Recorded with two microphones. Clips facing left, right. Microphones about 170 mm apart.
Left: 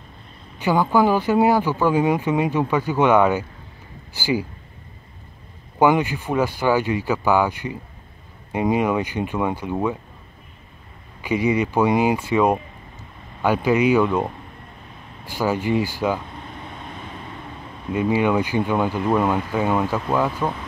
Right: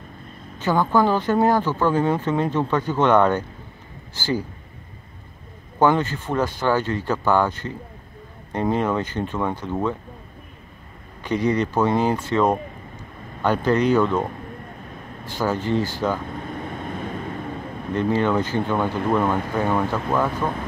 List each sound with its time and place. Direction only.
0.6 s speech: 10° left (ahead or behind)
5.8 s speech: 10° left (ahead or behind)
11.1 s speech: 10° left (ahead or behind)
16.3 s vehicle: 50° right (ahead or behind)
17.9 s speech: 10° left (ahead or behind)